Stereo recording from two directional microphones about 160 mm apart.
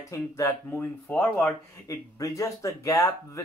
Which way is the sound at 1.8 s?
20° left (ahead or behind).